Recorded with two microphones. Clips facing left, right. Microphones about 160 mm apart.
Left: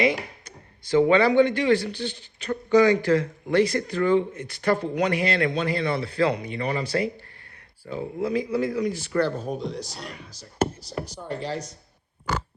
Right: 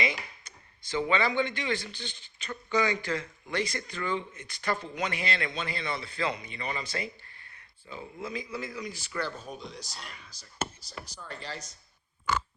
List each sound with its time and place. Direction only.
0.0 s a sound: 60° left (ahead or behind)
0.9 s speech: 50° left (ahead or behind)
1.3 s a man's voice: 65° left (ahead or behind)